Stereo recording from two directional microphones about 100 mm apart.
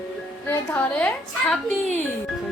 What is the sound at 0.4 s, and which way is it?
A woman's voice, 20° left (ahead or behind).